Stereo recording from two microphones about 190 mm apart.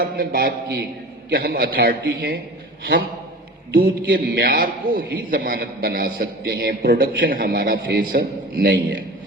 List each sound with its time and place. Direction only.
0.0 s a man's voice: 50° right (ahead or behind)
4.0 s a man's voice: 50° right (ahead or behind)
7.8 s a man's voice: 75° right (ahead or behind)
8.1 s a man's voice: 50° right (ahead or behind)